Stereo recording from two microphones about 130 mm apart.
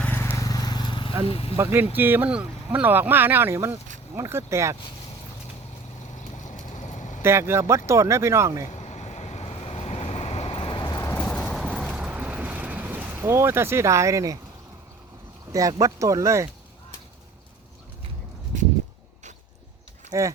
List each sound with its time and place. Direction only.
0.0 s vehicle: 15° left (ahead or behind); by 1.1 s 35° left (ahead or behind)
1.2 s speech: 45° left (ahead or behind)
1.5 s speech: 15° right (ahead or behind)
6.1 s a sound: 70° left (ahead or behind)
7.2 s speech: 20° right (ahead or behind)
8.7 s waves: 55° left (ahead or behind); by 11.1 s 30° left (ahead or behind)
11.3 s vehicle: 5° left (ahead or behind); by 14.3 s 25° right (ahead or behind)
15.5 s speech: 25° right (ahead or behind)
20.1 s speech: 25° right (ahead or behind)